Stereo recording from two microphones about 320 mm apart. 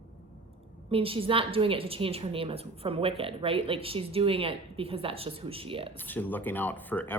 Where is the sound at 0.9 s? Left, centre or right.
Centre.